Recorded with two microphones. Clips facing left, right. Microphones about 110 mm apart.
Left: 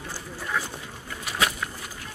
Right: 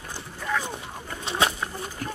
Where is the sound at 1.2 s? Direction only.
30° right (ahead or behind).